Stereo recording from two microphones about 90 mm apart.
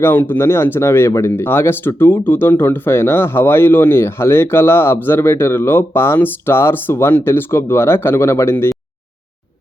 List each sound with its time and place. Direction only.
0.0 s speech: 25° left (ahead or behind)